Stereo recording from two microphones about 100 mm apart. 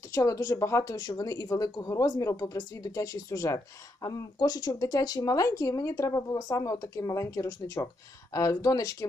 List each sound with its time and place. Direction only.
0.1 s speech: 30° left (ahead or behind)